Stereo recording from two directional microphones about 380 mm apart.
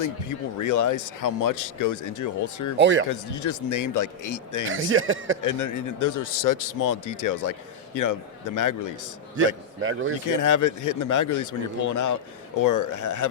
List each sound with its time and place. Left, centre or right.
0.0 s speech: left
2.7 s speech: right
3.1 s speech: left
4.7 s a man's voice: right
5.4 s speech: left
9.3 s a man's voice: right
10.2 s speech: left